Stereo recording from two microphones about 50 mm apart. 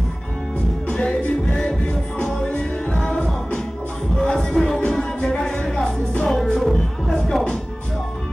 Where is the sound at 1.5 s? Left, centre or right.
Centre.